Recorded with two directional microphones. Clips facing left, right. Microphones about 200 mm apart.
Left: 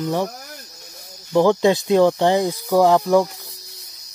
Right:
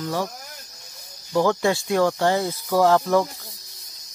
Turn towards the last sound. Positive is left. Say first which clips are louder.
# left 3 dB
turn(degrees=15)  # may be behind; listen again after turning